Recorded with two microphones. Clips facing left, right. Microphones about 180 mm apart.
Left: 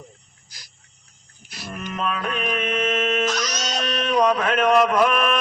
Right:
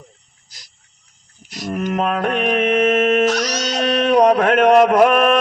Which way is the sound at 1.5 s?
40° right (ahead or behind).